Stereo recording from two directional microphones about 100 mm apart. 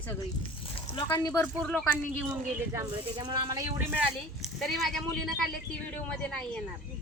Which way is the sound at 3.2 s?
45° right (ahead or behind).